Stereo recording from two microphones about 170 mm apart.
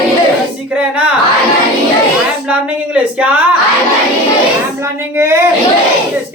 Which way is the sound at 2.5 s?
5° right (ahead or behind).